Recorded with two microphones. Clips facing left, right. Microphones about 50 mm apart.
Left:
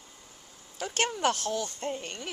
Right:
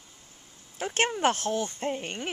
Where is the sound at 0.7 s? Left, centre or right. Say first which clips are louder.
Right 3 dB; right.